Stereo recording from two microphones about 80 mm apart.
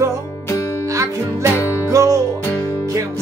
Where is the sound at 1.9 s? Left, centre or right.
Right.